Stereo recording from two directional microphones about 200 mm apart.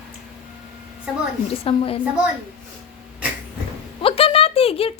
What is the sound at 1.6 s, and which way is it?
Speech, 30° left (ahead or behind).